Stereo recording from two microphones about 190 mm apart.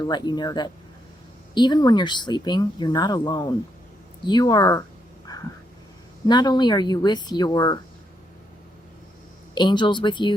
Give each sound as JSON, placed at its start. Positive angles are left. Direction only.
{"t": 0.0, "sound": "speech", "side_deg": 20}
{"t": 5.3, "sound": "vehicle", "side_deg": 20}
{"t": 6.2, "sound": "speech", "side_deg": 20}
{"t": 9.6, "sound": "speech", "side_deg": 25}